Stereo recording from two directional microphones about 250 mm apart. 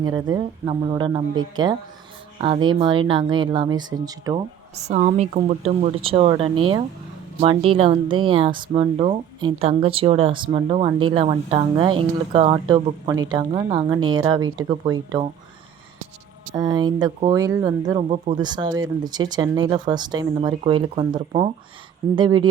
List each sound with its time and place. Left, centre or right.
0.0 s speech: centre
4.8 s speech: right
16.6 s speech: centre